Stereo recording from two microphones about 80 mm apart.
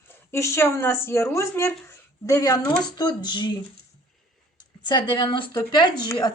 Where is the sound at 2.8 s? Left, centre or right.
Left.